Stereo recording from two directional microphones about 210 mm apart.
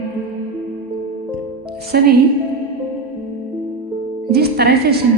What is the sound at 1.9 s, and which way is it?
Speech, 50° right (ahead or behind).